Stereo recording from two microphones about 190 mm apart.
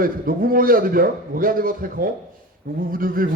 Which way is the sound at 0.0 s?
50° right (ahead or behind).